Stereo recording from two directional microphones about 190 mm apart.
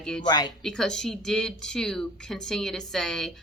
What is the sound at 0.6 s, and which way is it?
Speech, 5° left (ahead or behind).